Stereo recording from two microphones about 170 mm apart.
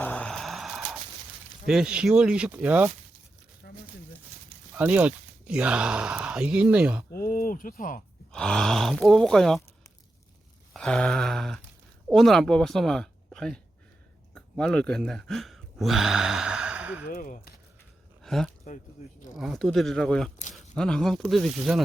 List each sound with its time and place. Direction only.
0.0 s a sound: 5° left (ahead or behind)
1.6 s speech: 5° right (ahead or behind)
4.7 s speech: 10° right (ahead or behind)
7.1 s a sound: 60° left (ahead or behind)
8.3 s speech: 5° left (ahead or behind)
10.8 s a woman's voice: 5° left (ahead or behind)
17.1 s speech: 50° left (ahead or behind)
18.2 s a sound: centre (ahead or behind)
19.4 s speech: centre (ahead or behind)